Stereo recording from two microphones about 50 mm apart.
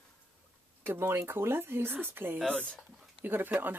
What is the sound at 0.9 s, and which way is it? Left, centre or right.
Speech, right.